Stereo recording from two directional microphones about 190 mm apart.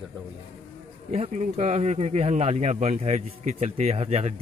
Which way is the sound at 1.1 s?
35° right (ahead or behind).